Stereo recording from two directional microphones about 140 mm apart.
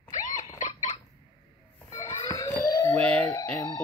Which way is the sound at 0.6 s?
60° left (ahead or behind).